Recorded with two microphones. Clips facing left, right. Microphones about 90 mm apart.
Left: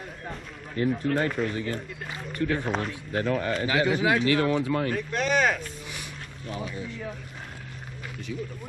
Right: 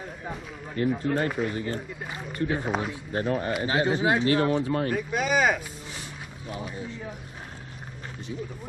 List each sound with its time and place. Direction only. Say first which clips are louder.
0.8 s speech: even; 10° right (ahead or behind)
2.9 s speech: even; 30° right (ahead or behind)
4.9 s speech: even; 5° right (ahead or behind)